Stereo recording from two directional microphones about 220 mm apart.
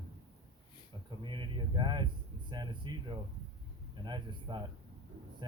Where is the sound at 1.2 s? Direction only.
20° right (ahead or behind).